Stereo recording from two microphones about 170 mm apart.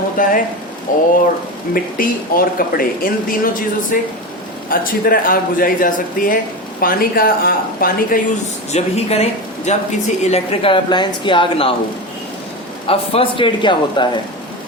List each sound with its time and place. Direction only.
0.2 s speech: 55° left (ahead or behind)
8.7 s a woman's voice: 40° left (ahead or behind)
12.9 s a man's voice: 30° left (ahead or behind)